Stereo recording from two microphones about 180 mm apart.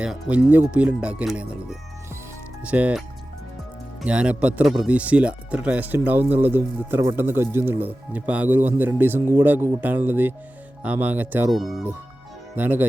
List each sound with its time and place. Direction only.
0.0 s speech: 5° right (ahead or behind)
2.6 s speech: 10° right (ahead or behind)
4.0 s speech: 5° right (ahead or behind)